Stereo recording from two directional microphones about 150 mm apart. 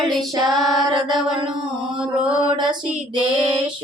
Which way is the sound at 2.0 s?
10° right (ahead or behind).